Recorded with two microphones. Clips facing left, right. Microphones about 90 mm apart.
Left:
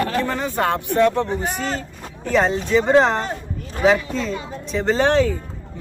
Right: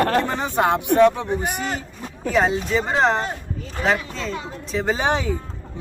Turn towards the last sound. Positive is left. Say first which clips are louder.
# left 4 dB
turn(degrees=-15)  # may be behind; listen again after turning